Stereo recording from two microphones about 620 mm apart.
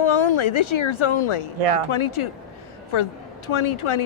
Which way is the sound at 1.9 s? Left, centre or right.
Left.